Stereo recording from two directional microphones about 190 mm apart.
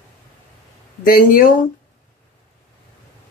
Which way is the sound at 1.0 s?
50° left (ahead or behind).